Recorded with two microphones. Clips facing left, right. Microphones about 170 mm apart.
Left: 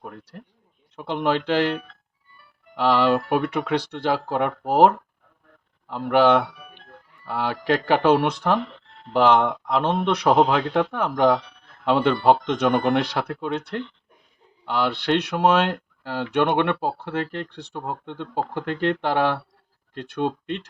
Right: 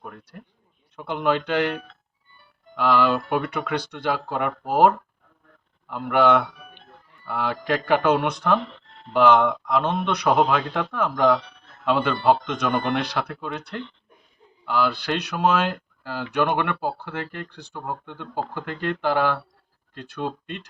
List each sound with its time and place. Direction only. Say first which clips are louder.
0.9 s speech: even; 30° left (ahead or behind)
5.9 s speech: left 1 dB; 30° left (ahead or behind)
14.6 s speech: even; 30° left (ahead or behind)